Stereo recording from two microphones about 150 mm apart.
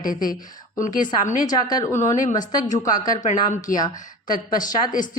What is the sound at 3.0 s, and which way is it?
Speech, 60° left (ahead or behind).